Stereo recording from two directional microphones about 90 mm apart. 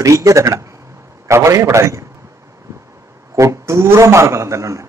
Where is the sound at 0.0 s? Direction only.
35° right (ahead or behind).